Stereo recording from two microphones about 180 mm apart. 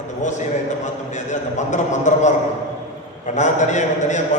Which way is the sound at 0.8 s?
40° left (ahead or behind).